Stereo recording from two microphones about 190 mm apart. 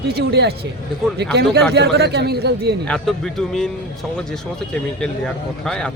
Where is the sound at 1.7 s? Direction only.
60° right (ahead or behind).